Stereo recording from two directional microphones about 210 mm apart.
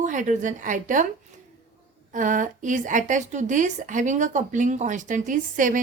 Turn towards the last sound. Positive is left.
turn(degrees=-40)  # may be behind; listen again after turning